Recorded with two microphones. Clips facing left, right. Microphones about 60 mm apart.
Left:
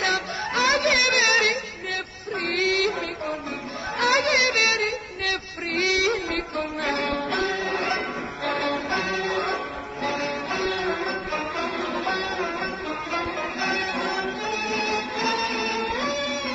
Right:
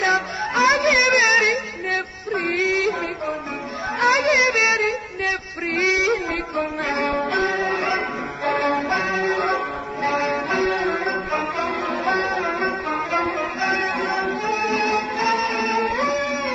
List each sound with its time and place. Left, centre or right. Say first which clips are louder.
0.0 s music: right 5 dB; right
4.0 s music: right 4 dB; right
7.6 s music: right 4 dB; centre
8.6 s music: right 5 dB; right
9.3 s church bell: right 5 dB; right
10.1 s music: right 8 dB; right
12.1 s music: right 9 dB; right
12.4 s music: right 4 dB; centre
12.6 s music: right 6 dB; right
13.6 s music: right 3 dB; right